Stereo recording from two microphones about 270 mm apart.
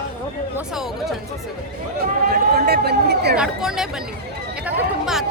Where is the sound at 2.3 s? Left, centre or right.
Right.